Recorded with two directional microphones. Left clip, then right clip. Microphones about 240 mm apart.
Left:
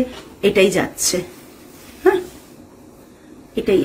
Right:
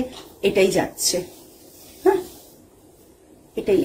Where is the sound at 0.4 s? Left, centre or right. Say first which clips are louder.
Left 4 dB; centre.